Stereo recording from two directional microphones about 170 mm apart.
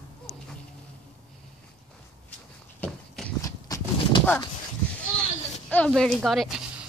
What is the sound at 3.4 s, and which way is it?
Horse, 25° left (ahead or behind).